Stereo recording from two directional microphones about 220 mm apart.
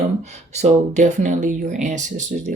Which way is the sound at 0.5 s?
30° right (ahead or behind).